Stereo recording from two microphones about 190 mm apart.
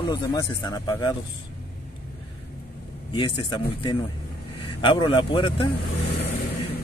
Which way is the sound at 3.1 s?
25° left (ahead or behind).